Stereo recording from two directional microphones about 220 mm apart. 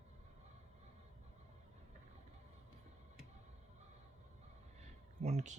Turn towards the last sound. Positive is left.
turn(degrees=-30)  # may be behind; listen again after turning